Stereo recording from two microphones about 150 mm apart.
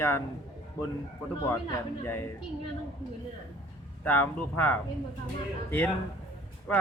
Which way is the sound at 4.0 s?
10° left (ahead or behind).